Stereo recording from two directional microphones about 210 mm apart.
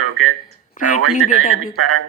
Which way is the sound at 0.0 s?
90° right.